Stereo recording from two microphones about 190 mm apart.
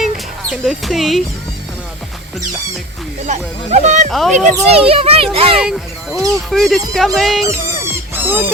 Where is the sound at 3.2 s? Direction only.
40° right (ahead or behind).